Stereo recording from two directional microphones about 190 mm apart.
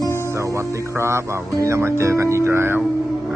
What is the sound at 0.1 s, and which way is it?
Music, 15° left (ahead or behind).